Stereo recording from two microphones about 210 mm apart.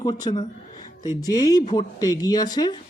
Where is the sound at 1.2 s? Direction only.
15° left (ahead or behind).